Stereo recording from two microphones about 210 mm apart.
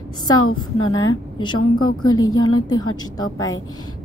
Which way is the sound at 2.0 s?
20° left (ahead or behind).